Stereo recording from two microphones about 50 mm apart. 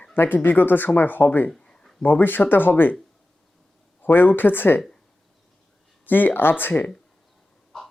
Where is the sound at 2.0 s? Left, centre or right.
Left.